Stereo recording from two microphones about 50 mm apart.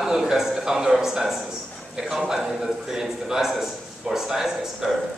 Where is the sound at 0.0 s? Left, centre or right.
Centre.